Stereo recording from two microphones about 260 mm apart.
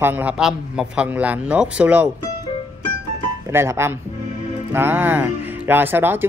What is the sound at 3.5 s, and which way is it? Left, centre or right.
A man's voice, centre.